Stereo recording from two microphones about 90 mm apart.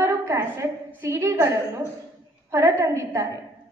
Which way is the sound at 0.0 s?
30° right (ahead or behind).